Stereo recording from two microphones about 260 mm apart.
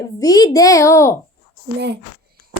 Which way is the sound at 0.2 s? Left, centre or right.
Centre.